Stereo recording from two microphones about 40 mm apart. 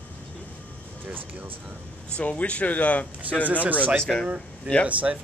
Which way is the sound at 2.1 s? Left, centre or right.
Left.